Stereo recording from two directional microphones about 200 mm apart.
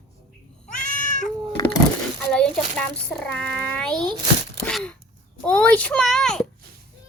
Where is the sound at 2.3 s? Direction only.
5° left (ahead or behind).